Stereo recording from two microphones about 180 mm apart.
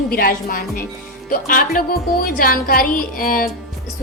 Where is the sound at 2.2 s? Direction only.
55° left (ahead or behind).